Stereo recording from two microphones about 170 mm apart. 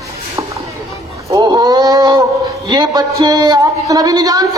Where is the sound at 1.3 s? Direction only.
20° right (ahead or behind).